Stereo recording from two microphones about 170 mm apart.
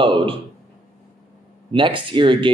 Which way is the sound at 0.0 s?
30° right (ahead or behind).